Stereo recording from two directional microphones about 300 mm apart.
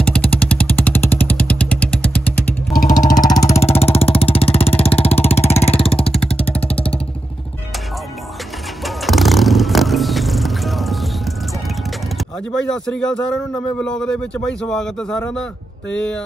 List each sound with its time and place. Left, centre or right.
0.0 s vehicle: centre
2.8 s vehicle: left
6.1 s vehicle: centre
8.8 s vehicle: centre
12.7 s a man's voice: centre